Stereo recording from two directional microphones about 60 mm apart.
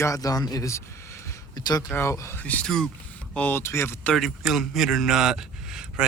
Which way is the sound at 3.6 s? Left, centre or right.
Left.